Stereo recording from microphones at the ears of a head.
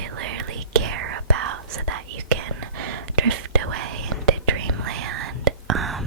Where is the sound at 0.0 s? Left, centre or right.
Right.